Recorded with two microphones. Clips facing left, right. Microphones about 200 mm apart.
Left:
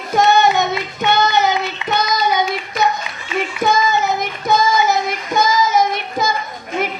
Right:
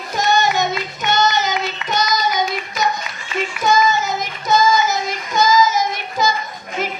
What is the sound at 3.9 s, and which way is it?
Child singing, 60° left (ahead or behind).